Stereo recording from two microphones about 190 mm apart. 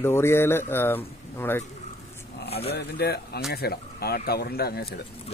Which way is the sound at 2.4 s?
30° left (ahead or behind).